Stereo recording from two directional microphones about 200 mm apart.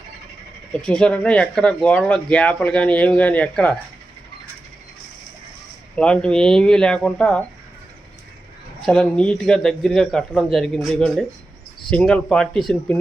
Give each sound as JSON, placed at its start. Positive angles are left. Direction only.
{"t": 0.8, "sound": "speech", "side_deg": 5}
{"t": 6.0, "sound": "speech", "side_deg": 5}
{"t": 8.8, "sound": "speech", "side_deg": 5}